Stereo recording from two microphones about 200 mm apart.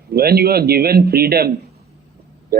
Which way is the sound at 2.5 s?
50° right (ahead or behind).